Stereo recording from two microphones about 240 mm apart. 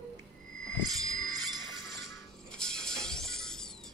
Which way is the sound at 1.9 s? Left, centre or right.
Centre.